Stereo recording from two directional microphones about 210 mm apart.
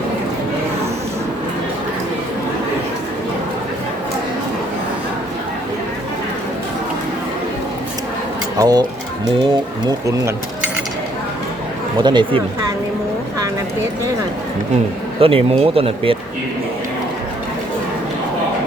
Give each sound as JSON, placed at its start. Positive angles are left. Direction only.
{"t": 8.5, "sound": "speech", "side_deg": -15}
{"t": 11.9, "sound": "speech", "side_deg": -20}
{"t": 15.2, "sound": "speech", "side_deg": -25}